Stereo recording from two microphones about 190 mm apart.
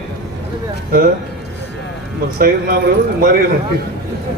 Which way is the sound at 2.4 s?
50° right (ahead or behind).